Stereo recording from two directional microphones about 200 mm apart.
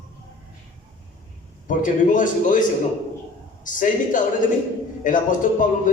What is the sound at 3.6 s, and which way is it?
A man's voice, 40° left (ahead or behind).